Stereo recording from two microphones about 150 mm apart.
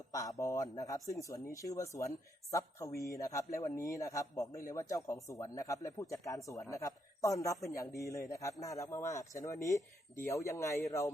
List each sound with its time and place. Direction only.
0.1 s a man's voice: 20° left (ahead or behind)